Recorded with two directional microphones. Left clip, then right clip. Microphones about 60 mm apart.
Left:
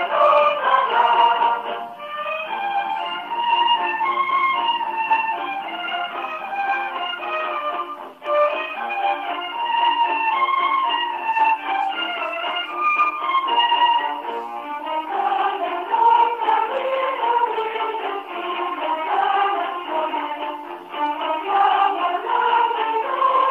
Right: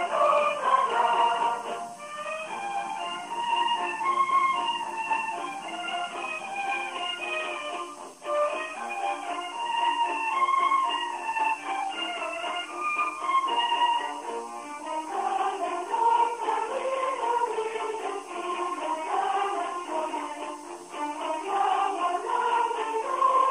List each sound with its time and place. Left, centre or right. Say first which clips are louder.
0.0 s music: left 7 dB; left
3.3 s music: left 8 dB; left
8.3 s music: left 8 dB; left
9.7 s music: left 8 dB; left
12.8 s music: left 9 dB; left
15.1 s music: left 7 dB; left